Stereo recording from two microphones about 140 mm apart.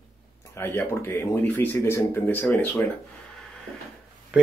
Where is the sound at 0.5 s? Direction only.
15° left (ahead or behind).